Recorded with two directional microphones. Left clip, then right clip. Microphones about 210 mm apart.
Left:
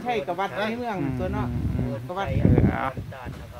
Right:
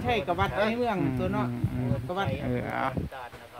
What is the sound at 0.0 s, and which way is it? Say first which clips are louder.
Speech: left 1 dB; 55° right (ahead or behind).